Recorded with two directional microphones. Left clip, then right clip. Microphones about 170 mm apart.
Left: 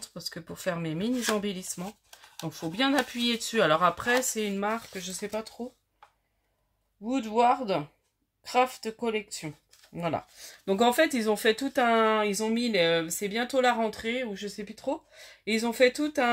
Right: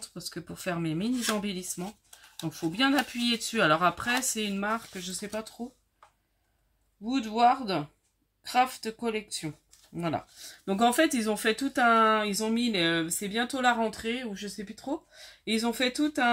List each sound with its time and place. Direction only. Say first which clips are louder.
0.0 s speech: left 1 dB; 25° left (ahead or behind)
1.1 s speech: left 3 dB; 15° left (ahead or behind)
1.4 s speech: left 1 dB; 25° left (ahead or behind)
7.1 s speech: even; 35° left (ahead or behind)